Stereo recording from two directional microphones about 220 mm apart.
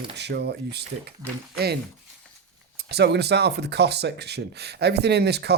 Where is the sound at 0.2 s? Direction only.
50° right (ahead or behind).